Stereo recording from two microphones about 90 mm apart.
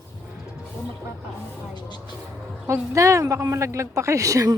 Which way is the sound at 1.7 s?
55° left (ahead or behind).